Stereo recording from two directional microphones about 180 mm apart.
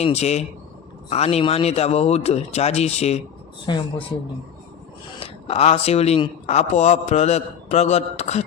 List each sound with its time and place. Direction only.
0.0 s a man's voice: 35° left (ahead or behind)
3.7 s speech: 25° left (ahead or behind)
5.2 s a man's voice: 35° left (ahead or behind)